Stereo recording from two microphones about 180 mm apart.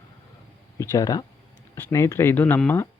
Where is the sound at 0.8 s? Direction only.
15° left (ahead or behind).